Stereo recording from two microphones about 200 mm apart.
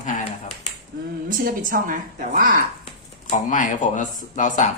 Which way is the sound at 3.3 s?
40° left (ahead or behind).